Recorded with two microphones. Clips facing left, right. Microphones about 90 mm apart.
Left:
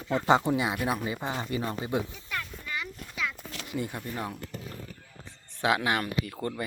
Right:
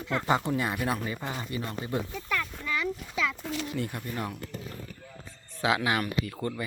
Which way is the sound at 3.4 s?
80° right.